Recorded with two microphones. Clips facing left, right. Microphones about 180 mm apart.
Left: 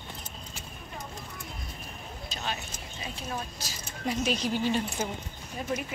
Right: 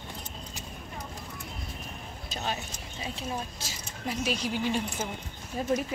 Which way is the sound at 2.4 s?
30° right (ahead or behind).